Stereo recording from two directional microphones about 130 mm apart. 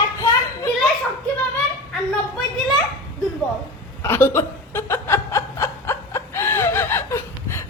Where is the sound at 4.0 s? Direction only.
20° left (ahead or behind).